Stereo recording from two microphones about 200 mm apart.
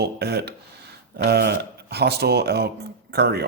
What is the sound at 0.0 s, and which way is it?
Speech, 55° right (ahead or behind).